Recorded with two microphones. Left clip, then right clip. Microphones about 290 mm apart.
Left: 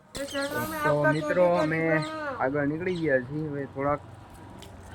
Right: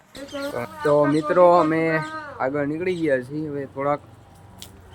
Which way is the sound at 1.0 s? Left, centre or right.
Centre.